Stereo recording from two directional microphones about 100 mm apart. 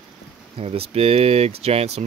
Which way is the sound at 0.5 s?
85° right.